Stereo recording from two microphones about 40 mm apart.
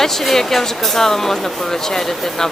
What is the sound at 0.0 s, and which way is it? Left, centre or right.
Speech, centre.